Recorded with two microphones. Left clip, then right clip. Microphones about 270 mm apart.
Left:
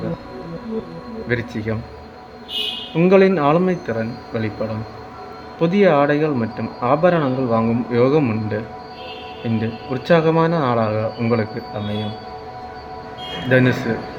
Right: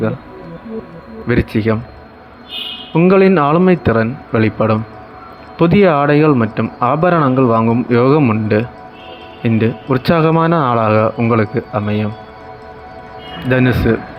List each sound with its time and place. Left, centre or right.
1.3 s speech: centre
2.9 s speech: centre
13.5 s speech: centre